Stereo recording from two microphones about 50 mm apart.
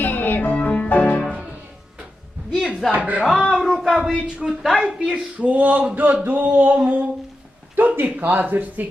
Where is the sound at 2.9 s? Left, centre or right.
Right.